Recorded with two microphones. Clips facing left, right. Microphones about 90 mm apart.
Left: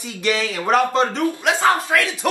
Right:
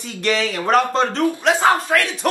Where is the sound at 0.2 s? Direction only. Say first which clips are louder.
Right 1 dB; 5° left (ahead or behind).